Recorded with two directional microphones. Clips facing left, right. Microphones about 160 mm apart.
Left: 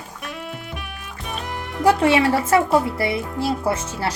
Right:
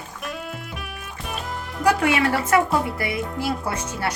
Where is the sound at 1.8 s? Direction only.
30° left (ahead or behind).